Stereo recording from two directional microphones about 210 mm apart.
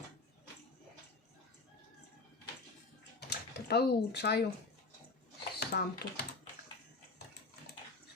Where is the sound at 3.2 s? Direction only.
50° left (ahead or behind).